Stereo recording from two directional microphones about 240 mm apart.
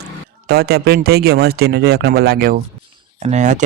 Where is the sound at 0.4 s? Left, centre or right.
Right.